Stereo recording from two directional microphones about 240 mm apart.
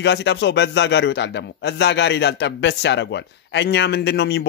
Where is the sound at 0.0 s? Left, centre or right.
Left.